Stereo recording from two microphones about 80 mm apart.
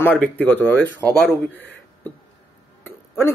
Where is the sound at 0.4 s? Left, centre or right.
Left.